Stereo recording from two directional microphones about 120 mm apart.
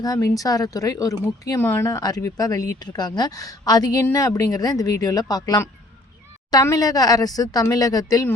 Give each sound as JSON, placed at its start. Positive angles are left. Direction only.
{"t": 0.0, "sound": "speech", "side_deg": 35}
{"t": 1.9, "sound": "speech", "side_deg": 30}